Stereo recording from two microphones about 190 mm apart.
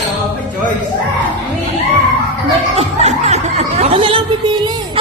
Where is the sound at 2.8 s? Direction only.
35° right (ahead or behind).